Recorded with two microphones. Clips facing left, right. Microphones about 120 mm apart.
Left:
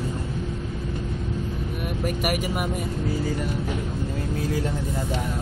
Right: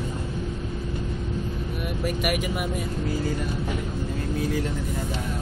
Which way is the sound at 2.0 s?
45° left (ahead or behind).